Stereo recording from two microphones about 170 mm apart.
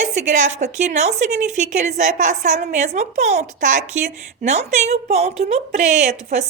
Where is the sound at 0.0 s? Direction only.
45° right (ahead or behind).